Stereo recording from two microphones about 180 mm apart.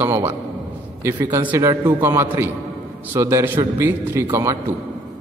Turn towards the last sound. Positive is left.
turn(degrees=-15)  # may be behind; listen again after turning